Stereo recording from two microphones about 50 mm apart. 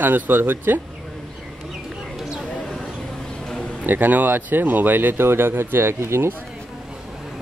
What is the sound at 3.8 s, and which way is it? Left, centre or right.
A man's voice, right.